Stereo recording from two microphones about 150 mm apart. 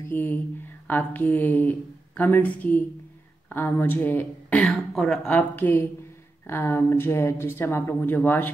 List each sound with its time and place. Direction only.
0.1 s speech: 15° left (ahead or behind)